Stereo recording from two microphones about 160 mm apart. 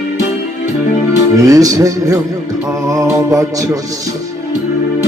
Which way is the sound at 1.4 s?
20° right (ahead or behind).